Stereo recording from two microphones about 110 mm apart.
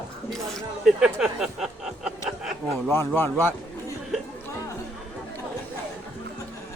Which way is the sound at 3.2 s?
15° left (ahead or behind).